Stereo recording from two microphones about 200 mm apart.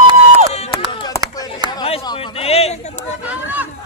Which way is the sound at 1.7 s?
25° left (ahead or behind).